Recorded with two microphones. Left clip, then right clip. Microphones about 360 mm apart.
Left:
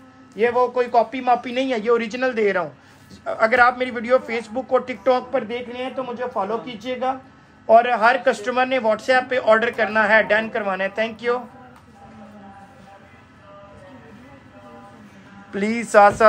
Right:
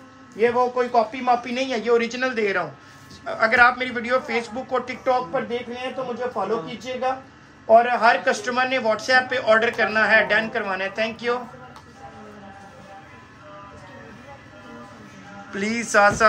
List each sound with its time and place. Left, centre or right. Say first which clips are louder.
0.4 s a man's voice: left 1 dB; left
15.5 s speech: left 4 dB; centre